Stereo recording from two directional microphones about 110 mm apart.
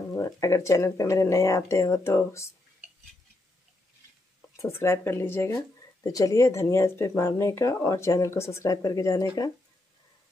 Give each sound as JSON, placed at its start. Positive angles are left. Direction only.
{"t": 0.1, "sound": "speech", "side_deg": 25}
{"t": 4.6, "sound": "speech", "side_deg": 25}